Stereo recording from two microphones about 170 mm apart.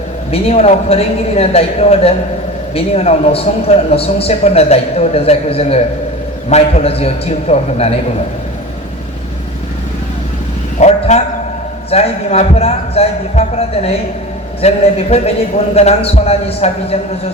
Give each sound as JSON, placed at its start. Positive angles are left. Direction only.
{"t": 0.3, "sound": "speech", "side_deg": 35}
{"t": 10.8, "sound": "a sound", "side_deg": 40}
{"t": 11.9, "sound": "speech", "side_deg": 35}